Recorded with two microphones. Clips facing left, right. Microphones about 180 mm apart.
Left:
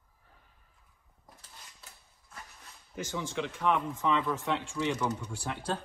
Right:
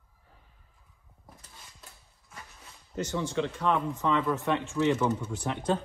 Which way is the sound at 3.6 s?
10° left (ahead or behind).